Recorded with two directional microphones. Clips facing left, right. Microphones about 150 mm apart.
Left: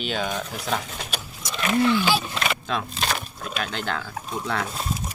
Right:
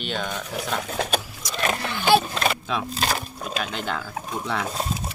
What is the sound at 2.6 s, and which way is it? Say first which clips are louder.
Speech: right 1 dB; 5° right (ahead or behind).